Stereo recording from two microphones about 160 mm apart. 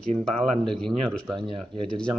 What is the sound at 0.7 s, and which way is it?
Speech, 5° left (ahead or behind).